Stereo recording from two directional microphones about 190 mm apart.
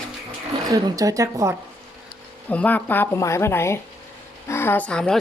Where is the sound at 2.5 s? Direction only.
10° left (ahead or behind).